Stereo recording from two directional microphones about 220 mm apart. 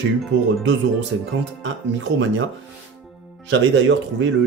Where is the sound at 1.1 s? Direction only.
65° right (ahead or behind).